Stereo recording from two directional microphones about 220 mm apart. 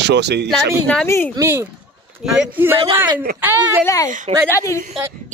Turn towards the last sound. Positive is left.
turn(degrees=10)  # may be behind; listen again after turning